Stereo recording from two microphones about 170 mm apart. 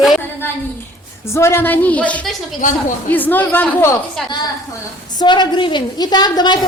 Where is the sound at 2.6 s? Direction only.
50° left (ahead or behind).